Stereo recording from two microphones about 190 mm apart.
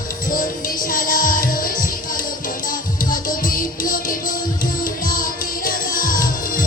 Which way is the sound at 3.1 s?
45° left (ahead or behind).